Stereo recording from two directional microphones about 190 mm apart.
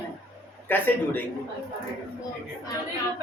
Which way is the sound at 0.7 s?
10° left (ahead or behind).